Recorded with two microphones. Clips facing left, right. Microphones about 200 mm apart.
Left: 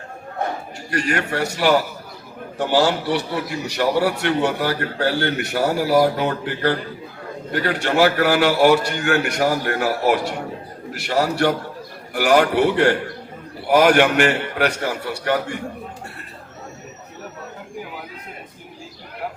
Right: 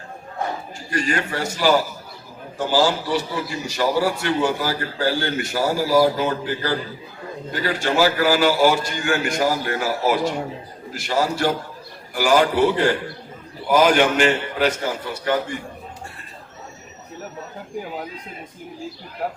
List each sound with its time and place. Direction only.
0.9 s a man's voice: 65° left (ahead or behind)